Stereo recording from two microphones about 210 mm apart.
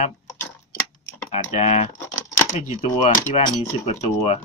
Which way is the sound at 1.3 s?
30° left (ahead or behind).